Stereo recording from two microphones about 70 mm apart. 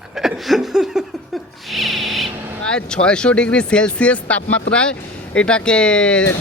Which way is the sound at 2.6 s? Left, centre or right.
Centre.